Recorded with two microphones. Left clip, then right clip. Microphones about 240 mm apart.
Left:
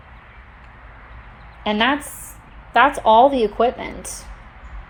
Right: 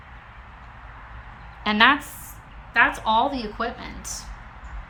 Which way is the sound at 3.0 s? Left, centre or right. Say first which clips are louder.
Left 9 dB; right.